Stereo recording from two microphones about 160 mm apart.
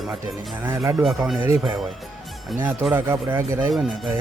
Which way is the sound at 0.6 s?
15° right (ahead or behind).